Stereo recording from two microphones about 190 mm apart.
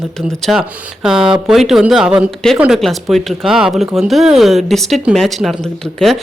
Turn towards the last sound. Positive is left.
turn(degrees=5)  # may be behind; listen again after turning